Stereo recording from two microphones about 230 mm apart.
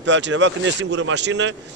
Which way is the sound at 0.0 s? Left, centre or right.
Right.